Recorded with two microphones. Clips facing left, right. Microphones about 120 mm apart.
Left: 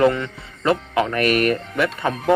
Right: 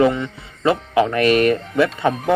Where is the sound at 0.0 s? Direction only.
15° right (ahead or behind).